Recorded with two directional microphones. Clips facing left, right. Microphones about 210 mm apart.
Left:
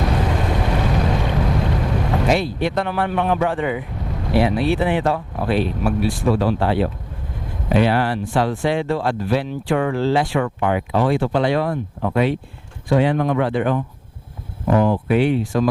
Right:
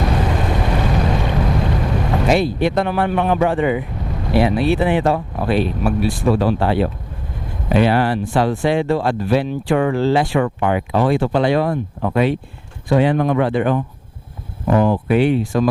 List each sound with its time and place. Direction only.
0.0 s boat: 20° right (ahead or behind)
4.4 s speech: 15° right (ahead or behind)
14.8 s speech: 30° right (ahead or behind)
15.0 s speech: 15° right (ahead or behind)